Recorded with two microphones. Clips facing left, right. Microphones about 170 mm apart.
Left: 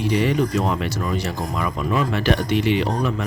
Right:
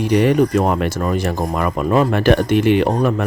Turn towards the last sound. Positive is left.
turn(degrees=-50)  # may be behind; listen again after turning